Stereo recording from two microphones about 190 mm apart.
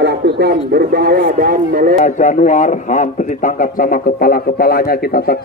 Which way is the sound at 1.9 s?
40° left (ahead or behind).